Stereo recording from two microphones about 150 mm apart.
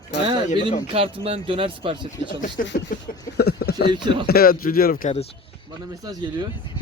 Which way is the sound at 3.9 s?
30° right (ahead or behind).